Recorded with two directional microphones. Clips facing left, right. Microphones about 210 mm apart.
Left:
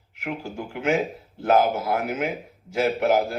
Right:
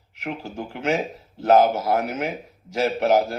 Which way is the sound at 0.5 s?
40° right (ahead or behind).